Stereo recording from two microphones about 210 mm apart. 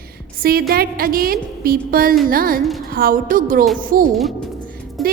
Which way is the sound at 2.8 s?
45° right (ahead or behind).